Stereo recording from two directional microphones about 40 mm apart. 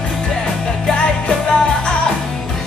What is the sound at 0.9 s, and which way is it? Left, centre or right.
Music, left.